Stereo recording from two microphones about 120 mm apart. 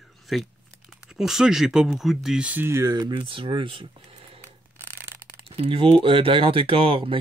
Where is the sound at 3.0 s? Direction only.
45° right (ahead or behind).